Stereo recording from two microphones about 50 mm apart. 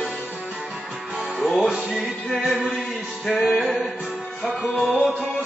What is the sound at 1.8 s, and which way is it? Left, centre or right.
Music, centre.